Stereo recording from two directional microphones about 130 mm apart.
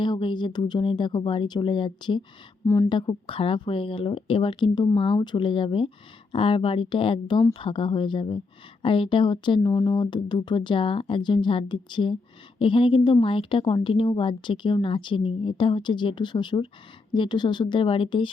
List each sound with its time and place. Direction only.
0.0 s a woman's voice: 35° left (ahead or behind)
2.6 s a woman's voice: 20° left (ahead or behind)
2.9 s a woman's voice: 40° left (ahead or behind)